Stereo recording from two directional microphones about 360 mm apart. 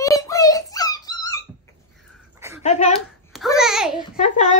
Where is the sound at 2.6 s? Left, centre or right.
Centre.